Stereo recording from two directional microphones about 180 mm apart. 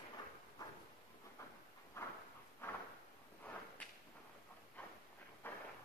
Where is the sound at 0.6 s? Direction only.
20° left (ahead or behind).